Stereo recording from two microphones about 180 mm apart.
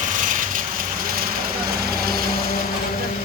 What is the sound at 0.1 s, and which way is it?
Vehicle, 45° right (ahead or behind).